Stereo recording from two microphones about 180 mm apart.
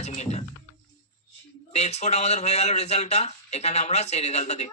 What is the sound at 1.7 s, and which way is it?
Speech, 40° left (ahead or behind).